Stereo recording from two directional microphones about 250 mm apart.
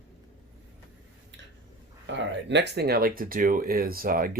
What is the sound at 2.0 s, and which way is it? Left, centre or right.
Speech, right.